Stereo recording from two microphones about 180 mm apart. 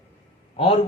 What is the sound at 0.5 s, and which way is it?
Speech, 30° left (ahead or behind).